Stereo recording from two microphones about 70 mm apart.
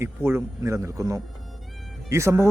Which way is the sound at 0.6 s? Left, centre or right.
Right.